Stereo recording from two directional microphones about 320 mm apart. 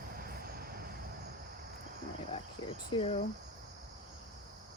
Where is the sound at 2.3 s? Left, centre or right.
Centre.